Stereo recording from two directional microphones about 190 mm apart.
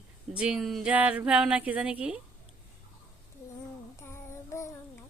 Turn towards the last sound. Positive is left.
turn(degrees=15)  # may be behind; listen again after turning